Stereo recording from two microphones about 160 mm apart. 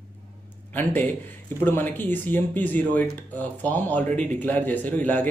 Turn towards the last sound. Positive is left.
turn(degrees=10)  # may be behind; listen again after turning